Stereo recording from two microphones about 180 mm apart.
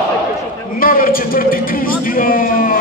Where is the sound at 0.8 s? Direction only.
55° left (ahead or behind).